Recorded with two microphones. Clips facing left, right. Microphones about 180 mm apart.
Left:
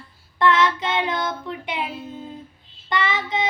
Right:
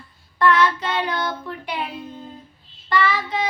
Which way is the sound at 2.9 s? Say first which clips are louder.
Right 2 dB; 20° left (ahead or behind).